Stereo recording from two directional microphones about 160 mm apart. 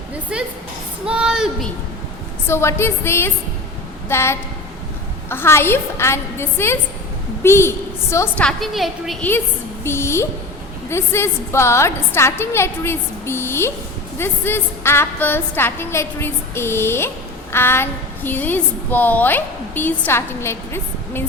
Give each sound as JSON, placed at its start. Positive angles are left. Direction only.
{"t": 0.3, "sound": "a woman's voice", "side_deg": -5}
{"t": 2.5, "sound": "a woman's voice", "side_deg": 15}
{"t": 8.4, "sound": "a woman's voice", "side_deg": 0}
{"t": 9.8, "sound": "a woman's voice", "side_deg": 15}